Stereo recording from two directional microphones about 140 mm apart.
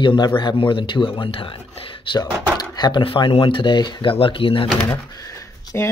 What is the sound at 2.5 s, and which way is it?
Speech, 30° left (ahead or behind).